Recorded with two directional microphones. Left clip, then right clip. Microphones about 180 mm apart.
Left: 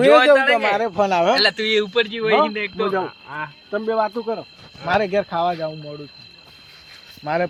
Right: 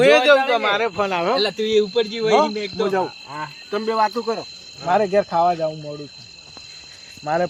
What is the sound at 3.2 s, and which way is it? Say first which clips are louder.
Speech: left 1 dB; 10° right (ahead or behind).